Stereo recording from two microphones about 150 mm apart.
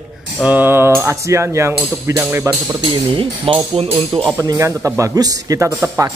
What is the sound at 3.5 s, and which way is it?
Speech, 40° right (ahead or behind).